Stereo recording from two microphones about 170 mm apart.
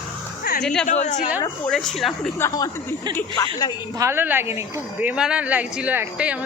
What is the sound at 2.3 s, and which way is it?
Speech, 20° left (ahead or behind).